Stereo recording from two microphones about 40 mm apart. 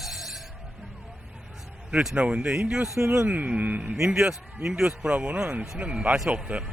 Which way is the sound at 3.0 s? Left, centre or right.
Right.